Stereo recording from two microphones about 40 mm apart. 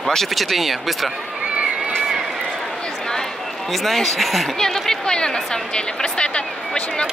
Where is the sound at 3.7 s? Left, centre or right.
Centre.